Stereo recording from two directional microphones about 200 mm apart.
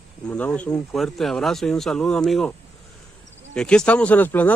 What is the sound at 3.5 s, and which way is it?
Speech, 5° left (ahead or behind).